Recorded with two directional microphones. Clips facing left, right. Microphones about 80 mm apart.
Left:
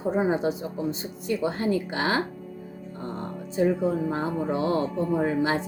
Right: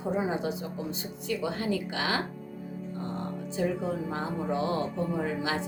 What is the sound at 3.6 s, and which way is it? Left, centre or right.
Speech, left.